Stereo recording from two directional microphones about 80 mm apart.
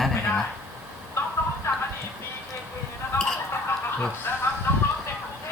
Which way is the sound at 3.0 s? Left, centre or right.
Left.